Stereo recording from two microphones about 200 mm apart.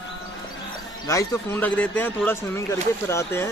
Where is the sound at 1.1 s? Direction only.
10° left (ahead or behind).